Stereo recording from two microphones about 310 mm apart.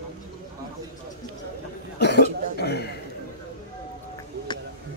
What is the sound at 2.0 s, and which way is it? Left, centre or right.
Cough, left.